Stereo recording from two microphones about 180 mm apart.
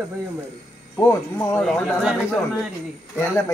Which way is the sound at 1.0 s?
5° left (ahead or behind).